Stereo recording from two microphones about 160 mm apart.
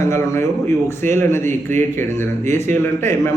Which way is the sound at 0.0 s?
15° left (ahead or behind).